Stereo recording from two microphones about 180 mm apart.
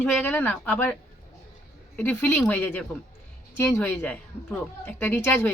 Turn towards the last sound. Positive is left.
turn(degrees=10)  # may be behind; listen again after turning